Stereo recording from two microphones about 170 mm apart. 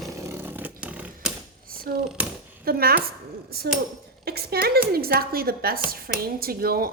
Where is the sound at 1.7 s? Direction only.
60° right (ahead or behind).